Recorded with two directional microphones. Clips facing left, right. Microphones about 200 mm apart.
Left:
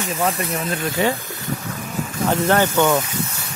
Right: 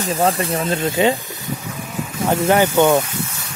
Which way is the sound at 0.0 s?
35° right (ahead or behind).